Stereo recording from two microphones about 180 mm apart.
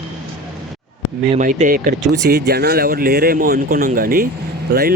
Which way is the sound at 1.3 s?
45° right (ahead or behind).